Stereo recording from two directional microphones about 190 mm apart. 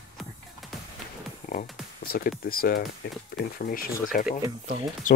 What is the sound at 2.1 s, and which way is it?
Speech, 50° left (ahead or behind).